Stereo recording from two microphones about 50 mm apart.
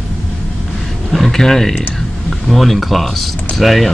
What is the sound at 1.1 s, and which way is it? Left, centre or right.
Speech, centre.